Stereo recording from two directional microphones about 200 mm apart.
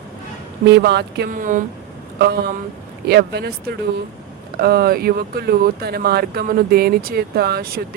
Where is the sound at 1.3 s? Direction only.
40° right (ahead or behind).